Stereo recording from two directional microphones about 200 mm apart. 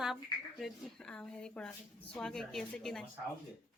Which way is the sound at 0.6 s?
5° left (ahead or behind).